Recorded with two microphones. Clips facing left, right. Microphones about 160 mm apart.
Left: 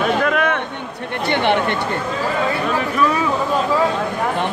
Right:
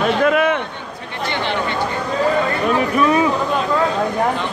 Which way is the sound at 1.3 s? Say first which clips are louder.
Left 5 dB; 60° left (ahead or behind).